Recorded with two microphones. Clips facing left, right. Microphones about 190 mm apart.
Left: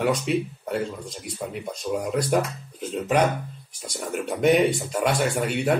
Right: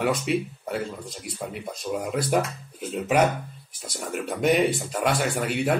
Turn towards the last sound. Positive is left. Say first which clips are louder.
# left 1 dB
turn(degrees=0)  # may be behind; listen again after turning